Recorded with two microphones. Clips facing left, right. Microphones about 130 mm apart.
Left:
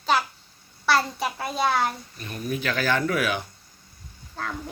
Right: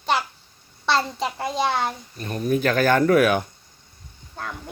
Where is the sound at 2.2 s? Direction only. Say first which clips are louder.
Right 9 dB; 40° right (ahead or behind).